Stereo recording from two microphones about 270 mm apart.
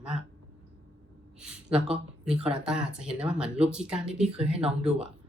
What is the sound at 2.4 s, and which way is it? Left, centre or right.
Speech, centre.